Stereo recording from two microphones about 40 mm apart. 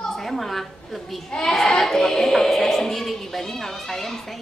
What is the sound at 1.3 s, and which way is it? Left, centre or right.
Speech, centre.